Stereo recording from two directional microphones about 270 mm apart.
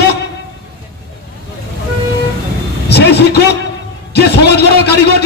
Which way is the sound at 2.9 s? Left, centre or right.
Left.